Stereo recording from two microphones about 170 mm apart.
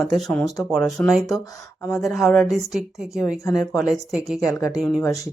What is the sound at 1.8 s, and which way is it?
Speech, 15° left (ahead or behind).